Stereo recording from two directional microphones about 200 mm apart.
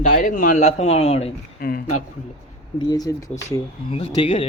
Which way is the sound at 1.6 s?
45° left (ahead or behind).